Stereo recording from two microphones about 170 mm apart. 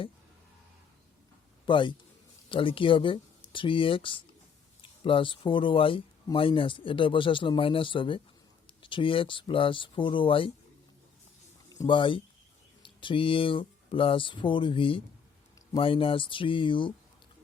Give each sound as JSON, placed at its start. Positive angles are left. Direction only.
{"t": 1.6, "sound": "a man's voice", "side_deg": 30}
{"t": 11.7, "sound": "speech", "side_deg": 25}